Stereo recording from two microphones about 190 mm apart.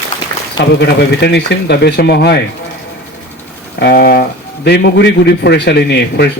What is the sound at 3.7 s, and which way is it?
A man's voice, 60° left (ahead or behind).